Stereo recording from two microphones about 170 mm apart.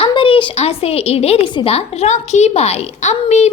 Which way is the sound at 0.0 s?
30° left (ahead or behind).